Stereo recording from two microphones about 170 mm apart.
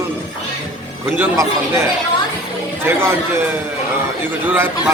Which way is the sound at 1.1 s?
15° right (ahead or behind).